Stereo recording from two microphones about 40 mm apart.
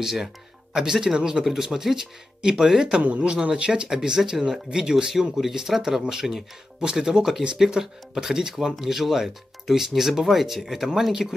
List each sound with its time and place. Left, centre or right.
0.0 s speech: centre
1.4 s speech: centre
3.0 s speech: right
3.4 s speech: right; by 11.3 s centre